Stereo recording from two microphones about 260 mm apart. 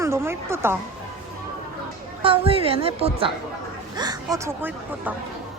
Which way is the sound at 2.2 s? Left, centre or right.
Right.